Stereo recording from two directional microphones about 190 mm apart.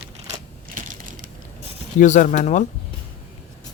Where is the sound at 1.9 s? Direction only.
40° left (ahead or behind).